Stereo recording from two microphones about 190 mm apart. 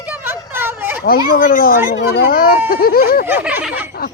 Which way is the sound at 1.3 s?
45° left (ahead or behind).